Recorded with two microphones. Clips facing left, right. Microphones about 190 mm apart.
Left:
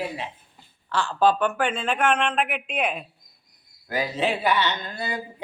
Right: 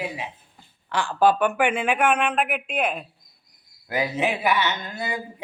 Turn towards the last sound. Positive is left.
turn(degrees=-10)  # may be behind; listen again after turning